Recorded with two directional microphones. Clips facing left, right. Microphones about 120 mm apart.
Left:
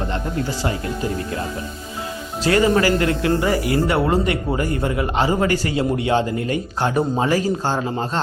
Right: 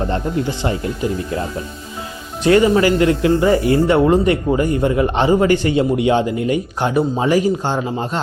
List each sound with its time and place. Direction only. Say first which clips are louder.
2.4 s speech: right 4 dB; 20° right (ahead or behind)